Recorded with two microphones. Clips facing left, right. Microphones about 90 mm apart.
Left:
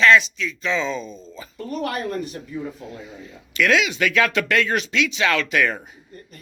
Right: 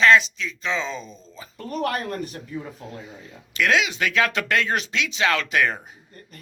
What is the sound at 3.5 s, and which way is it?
Speech, 30° right (ahead or behind).